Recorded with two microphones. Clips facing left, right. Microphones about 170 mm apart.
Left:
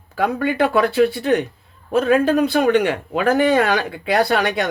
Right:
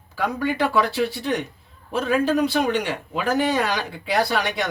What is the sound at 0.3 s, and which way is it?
A man's voice, 55° left (ahead or behind).